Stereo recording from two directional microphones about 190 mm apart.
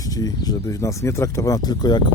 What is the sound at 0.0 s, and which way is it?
Speech, 20° left (ahead or behind).